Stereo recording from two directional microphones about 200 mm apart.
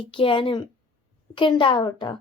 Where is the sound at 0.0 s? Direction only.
25° left (ahead or behind).